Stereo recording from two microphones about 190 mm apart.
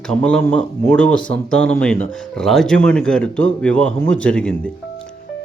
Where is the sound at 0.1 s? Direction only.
5° left (ahead or behind).